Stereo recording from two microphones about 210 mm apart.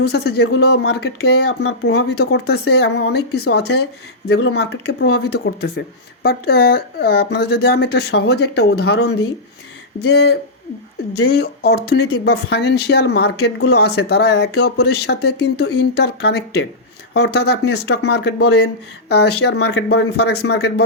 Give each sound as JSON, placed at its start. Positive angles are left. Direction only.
{"t": 0.0, "sound": "speech", "side_deg": 50}
{"t": 11.3, "sound": "speech", "side_deg": 50}